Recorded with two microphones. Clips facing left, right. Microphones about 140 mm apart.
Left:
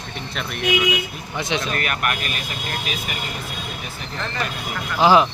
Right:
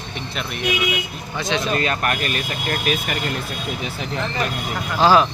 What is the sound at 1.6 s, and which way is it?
Speech, 25° right (ahead or behind).